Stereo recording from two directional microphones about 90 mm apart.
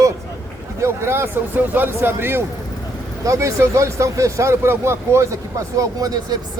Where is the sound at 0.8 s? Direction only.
25° right (ahead or behind).